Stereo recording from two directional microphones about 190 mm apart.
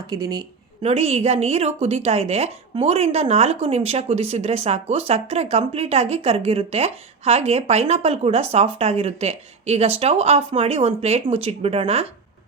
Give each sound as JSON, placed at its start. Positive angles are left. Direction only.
{"t": 0.1, "sound": "a woman's voice", "side_deg": -20}